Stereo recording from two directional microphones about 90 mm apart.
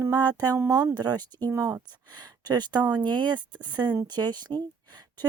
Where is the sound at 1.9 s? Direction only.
50° right (ahead or behind).